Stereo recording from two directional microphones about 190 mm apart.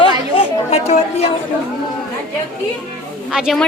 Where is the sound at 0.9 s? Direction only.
35° left (ahead or behind).